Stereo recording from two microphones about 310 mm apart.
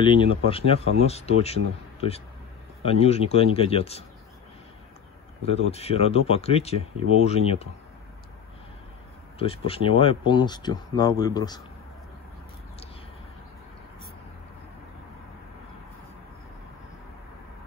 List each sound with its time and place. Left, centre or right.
0.0 s speech: centre
5.4 s speech: centre
9.4 s speech: centre